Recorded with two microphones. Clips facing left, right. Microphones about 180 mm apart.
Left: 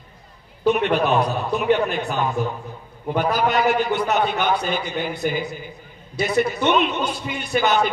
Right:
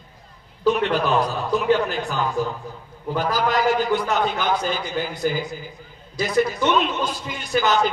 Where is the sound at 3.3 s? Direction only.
65° left (ahead or behind).